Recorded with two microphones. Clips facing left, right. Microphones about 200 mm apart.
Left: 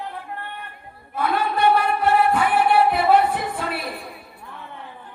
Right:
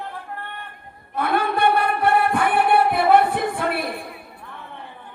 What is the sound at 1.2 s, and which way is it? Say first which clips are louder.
Singing: right 1 dB; 55° right (ahead or behind).